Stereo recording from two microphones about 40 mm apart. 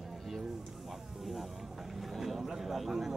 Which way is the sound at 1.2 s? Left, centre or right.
Centre.